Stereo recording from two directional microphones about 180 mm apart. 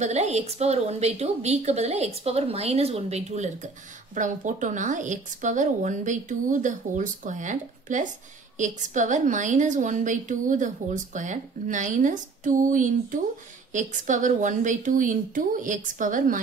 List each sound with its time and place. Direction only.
0.0 s a woman's voice: 40° right (ahead or behind)